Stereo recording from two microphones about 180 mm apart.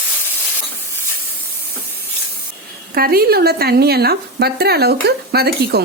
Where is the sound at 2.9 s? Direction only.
55° right (ahead or behind).